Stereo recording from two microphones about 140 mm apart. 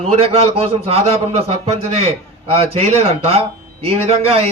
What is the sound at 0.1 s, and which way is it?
Speech, 45° right (ahead or behind).